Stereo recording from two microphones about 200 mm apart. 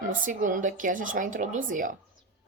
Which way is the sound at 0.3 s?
40° right (ahead or behind).